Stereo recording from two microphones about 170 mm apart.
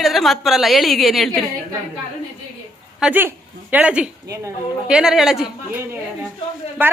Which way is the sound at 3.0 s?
10° right (ahead or behind).